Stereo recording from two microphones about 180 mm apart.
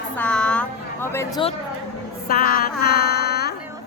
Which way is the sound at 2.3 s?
55° left (ahead or behind).